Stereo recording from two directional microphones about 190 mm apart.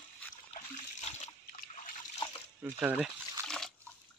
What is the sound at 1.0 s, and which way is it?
Splash, 35° left (ahead or behind).